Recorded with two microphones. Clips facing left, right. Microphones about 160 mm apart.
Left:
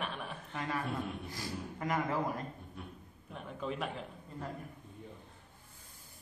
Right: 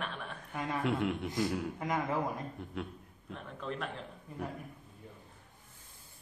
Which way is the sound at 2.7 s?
90° right.